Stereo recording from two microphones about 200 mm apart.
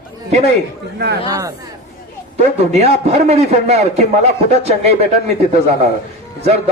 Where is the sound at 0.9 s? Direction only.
55° right (ahead or behind).